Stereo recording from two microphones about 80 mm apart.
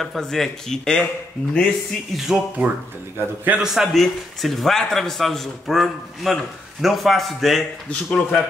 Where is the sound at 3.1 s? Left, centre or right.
Right.